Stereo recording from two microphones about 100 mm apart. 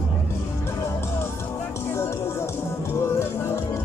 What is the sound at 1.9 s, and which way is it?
Music, 25° left (ahead or behind).